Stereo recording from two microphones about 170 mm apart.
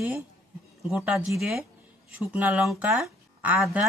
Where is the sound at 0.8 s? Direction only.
5° right (ahead or behind).